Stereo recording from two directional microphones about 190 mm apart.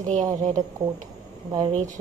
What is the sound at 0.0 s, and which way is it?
Speech, 40° right (ahead or behind).